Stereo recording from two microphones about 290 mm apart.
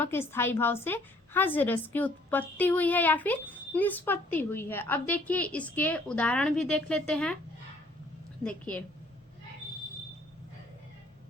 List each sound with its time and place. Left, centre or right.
0.0 s a woman's voice: centre
8.4 s a woman's voice: centre